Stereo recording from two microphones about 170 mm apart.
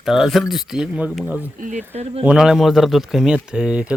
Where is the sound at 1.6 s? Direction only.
50° right (ahead or behind).